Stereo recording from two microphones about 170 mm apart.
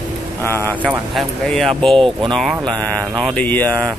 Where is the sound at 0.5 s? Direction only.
15° left (ahead or behind).